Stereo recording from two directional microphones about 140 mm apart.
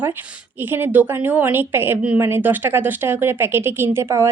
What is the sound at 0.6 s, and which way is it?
Speech, 15° right (ahead or behind).